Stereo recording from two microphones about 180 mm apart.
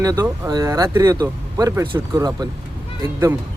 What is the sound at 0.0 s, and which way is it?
Speech, 20° right (ahead or behind).